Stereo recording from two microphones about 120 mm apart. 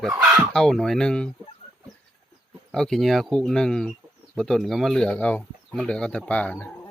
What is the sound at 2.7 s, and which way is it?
Speech, 5° left (ahead or behind).